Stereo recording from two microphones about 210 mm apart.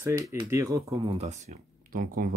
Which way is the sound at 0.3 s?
15° right (ahead or behind).